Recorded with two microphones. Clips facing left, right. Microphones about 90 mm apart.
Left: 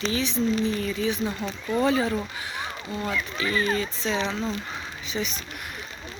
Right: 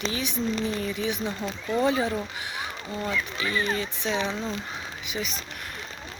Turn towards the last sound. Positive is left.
turn(degrees=-5)  # may be behind; listen again after turning